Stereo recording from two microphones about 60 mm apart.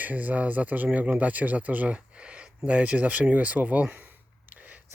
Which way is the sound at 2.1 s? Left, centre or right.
Centre.